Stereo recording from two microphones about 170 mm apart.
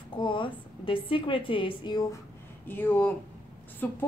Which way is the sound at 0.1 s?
30° left (ahead or behind).